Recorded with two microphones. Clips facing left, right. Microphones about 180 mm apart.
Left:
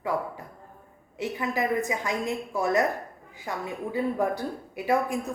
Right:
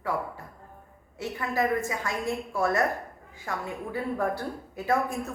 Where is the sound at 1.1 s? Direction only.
20° left (ahead or behind).